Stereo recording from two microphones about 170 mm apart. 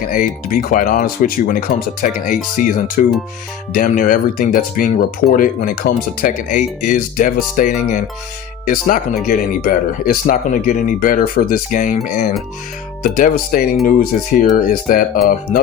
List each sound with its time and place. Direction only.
0.1 s speech: 55° left (ahead or behind)